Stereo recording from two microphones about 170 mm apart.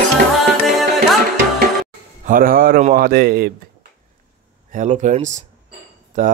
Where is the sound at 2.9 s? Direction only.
60° right (ahead or behind).